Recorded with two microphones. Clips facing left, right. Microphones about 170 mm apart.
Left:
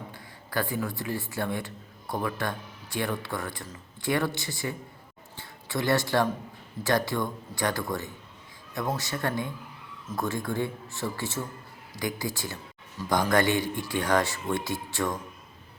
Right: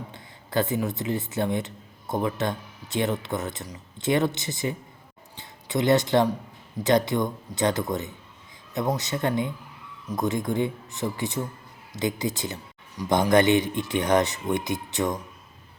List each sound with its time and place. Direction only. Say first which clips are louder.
0.1 s speech: right 7 dB; 20° right (ahead or behind)